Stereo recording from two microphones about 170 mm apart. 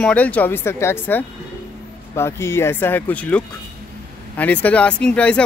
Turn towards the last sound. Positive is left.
turn(degrees=5)  # may be behind; listen again after turning